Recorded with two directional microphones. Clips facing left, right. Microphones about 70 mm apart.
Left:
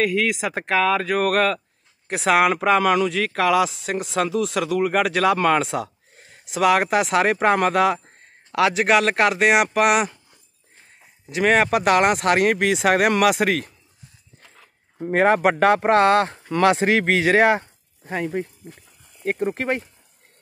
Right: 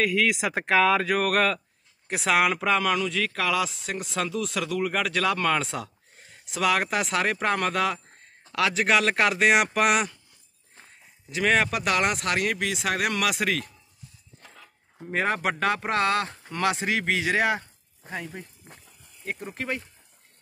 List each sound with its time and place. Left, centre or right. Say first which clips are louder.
0.0 s speech: left 3 dB; centre
2.5 s speech: left 6 dB; centre
11.4 s speech: left 5 dB; left
11.7 s speech: left 8 dB; left
13.2 s speech: left 8 dB; left
15.0 s speech: left 9 dB; left
18.1 s speech: left 10 dB; left
19.2 s speech: left 9 dB; left